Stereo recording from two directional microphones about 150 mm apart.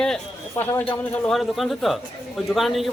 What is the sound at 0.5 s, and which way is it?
Speech, 15° left (ahead or behind).